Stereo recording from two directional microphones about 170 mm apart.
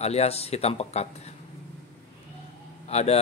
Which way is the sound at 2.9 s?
40° left (ahead or behind).